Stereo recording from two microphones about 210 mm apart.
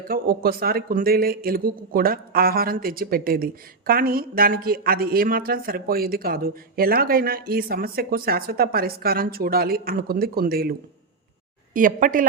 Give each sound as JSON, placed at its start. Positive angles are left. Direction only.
{"t": 0.1, "sound": "speech", "side_deg": -45}